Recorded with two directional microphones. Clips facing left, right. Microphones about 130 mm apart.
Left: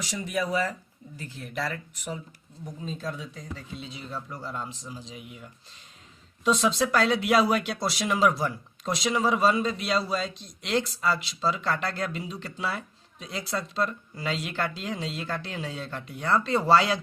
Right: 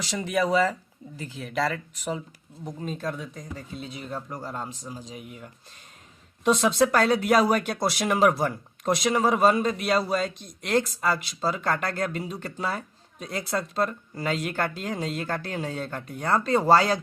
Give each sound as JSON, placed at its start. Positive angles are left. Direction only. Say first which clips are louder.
{"t": 0.1, "sound": "speech", "louder": "right 5 dB", "side_deg": -90}
{"t": 2.8, "sound": "speech", "louder": "right 3 dB", "side_deg": -50}